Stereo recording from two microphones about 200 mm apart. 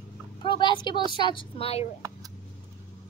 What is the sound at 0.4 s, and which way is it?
A woman's voice, 25° left (ahead or behind).